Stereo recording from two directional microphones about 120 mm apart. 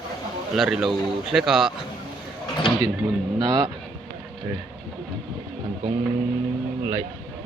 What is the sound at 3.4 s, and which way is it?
Speech, 35° right (ahead or behind).